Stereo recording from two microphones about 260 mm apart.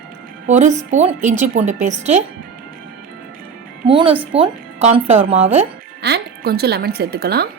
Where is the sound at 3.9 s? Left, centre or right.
Centre.